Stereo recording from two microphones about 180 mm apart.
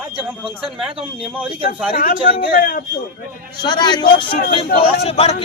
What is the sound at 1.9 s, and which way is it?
Speech, 55° left (ahead or behind).